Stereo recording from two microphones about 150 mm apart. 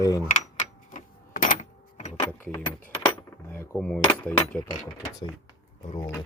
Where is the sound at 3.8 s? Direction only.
5° left (ahead or behind).